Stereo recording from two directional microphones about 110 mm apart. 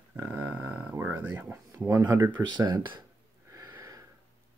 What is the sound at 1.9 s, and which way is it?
Speech, 30° right (ahead or behind).